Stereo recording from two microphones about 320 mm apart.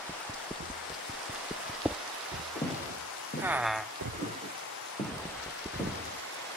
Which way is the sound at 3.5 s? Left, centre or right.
Centre.